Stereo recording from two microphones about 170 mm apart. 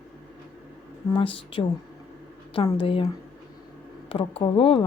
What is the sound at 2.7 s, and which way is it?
Speech, 30° left (ahead or behind).